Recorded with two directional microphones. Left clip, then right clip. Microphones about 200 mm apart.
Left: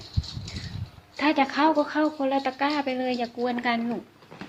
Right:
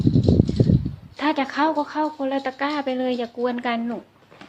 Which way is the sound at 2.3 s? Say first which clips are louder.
Right 1 dB; 25° right (ahead or behind).